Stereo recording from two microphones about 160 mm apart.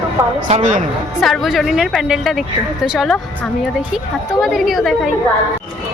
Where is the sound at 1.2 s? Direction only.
Centre (ahead or behind).